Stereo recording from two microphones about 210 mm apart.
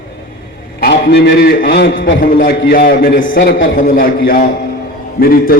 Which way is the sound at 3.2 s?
65° left (ahead or behind).